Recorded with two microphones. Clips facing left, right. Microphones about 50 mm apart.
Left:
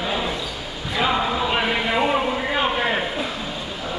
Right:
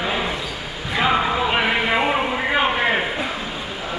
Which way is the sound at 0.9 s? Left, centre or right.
Right.